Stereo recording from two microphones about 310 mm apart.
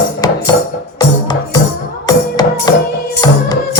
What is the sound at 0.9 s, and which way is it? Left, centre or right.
Music, centre.